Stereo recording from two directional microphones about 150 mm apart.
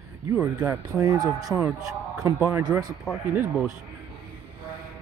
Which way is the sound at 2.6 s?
25° right (ahead or behind).